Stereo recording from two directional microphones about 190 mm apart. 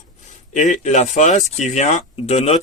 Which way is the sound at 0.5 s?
40° left (ahead or behind).